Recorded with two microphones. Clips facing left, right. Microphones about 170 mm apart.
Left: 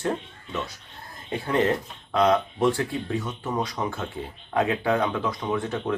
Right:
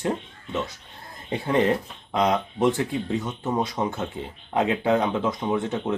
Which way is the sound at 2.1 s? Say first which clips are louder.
Left 2 dB; 20° right (ahead or behind).